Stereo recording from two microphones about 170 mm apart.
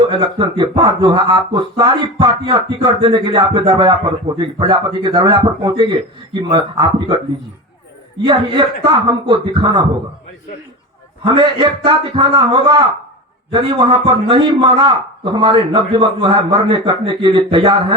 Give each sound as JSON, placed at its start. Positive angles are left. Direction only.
{"t": 0.1, "sound": "a man's voice", "side_deg": -30}
{"t": 8.2, "sound": "a man's voice", "side_deg": -30}
{"t": 11.3, "sound": "a man's voice", "side_deg": -30}